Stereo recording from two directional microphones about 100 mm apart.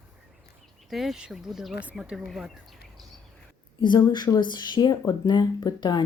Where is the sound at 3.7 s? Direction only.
50° left (ahead or behind).